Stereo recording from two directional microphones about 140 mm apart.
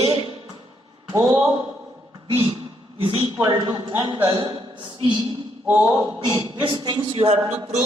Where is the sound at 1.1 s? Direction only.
25° right (ahead or behind).